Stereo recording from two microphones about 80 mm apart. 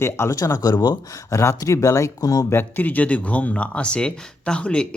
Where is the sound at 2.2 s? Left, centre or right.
Left.